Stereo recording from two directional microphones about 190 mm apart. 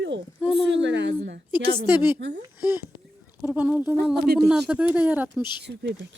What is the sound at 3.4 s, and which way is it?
Speech, 5° right (ahead or behind).